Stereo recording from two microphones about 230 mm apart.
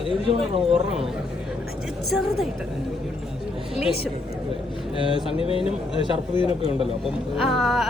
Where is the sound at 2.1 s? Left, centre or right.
Centre.